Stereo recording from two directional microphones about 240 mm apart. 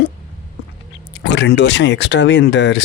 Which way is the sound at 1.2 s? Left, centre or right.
Left.